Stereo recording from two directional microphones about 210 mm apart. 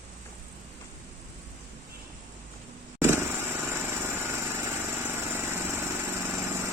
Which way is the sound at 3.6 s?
10° right (ahead or behind).